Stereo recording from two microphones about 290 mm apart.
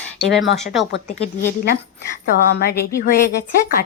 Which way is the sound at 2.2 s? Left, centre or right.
Left.